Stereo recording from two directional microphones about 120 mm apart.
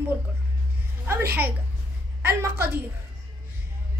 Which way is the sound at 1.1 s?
20° right (ahead or behind).